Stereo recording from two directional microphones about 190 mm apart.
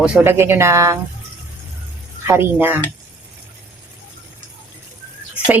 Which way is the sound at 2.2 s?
15° right (ahead or behind).